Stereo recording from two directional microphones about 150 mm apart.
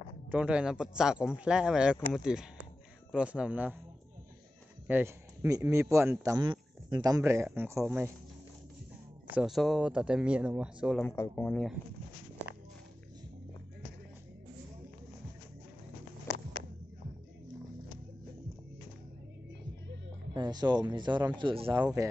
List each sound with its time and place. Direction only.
0.3 s speech: 10° right (ahead or behind)
4.8 s speech: 15° right (ahead or behind)
6.4 s speech: 30° right (ahead or behind); by 7.8 s 15° right (ahead or behind)
9.3 s speech: 5° right (ahead or behind)
11.0 s speech: 15° left (ahead or behind)
20.3 s speech: 30° right (ahead or behind)